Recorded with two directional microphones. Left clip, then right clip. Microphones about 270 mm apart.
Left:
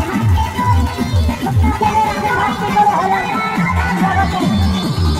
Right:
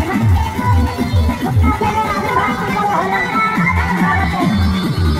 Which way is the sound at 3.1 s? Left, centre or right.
Centre.